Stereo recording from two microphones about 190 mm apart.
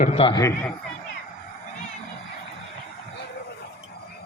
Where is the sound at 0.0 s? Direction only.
35° left (ahead or behind).